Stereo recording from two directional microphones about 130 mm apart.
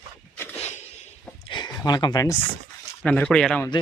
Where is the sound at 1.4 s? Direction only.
35° left (ahead or behind).